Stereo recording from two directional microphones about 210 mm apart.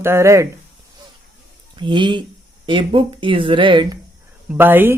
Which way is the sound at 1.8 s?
20° right (ahead or behind).